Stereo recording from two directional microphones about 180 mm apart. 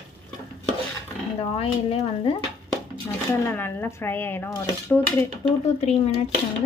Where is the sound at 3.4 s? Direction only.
10° left (ahead or behind).